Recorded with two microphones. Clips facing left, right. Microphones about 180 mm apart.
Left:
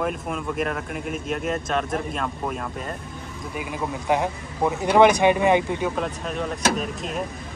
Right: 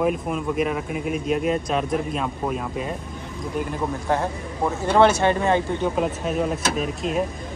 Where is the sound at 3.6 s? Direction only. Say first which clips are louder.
Right 2 dB; 10° left (ahead or behind).